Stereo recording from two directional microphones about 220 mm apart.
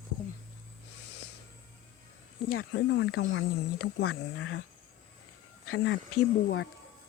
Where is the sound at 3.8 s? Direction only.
70° left (ahead or behind).